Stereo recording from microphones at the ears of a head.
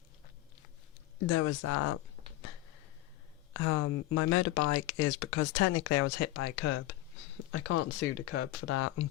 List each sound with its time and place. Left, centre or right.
1.2 s speech: left